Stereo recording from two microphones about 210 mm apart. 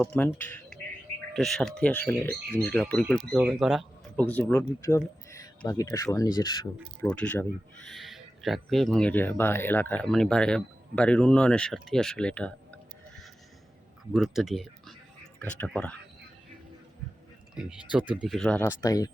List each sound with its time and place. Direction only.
0.0 s speech: 5° left (ahead or behind)
0.7 s bird: 5° left (ahead or behind)
1.4 s speech: centre (ahead or behind); by 6.6 s 20° left (ahead or behind)
7.0 s speech: 5° left (ahead or behind)
17.5 s speech: 5° right (ahead or behind)
18.8 s speech: 15° left (ahead or behind)